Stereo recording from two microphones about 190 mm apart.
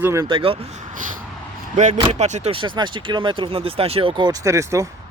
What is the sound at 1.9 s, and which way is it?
Speech, 30° right (ahead or behind).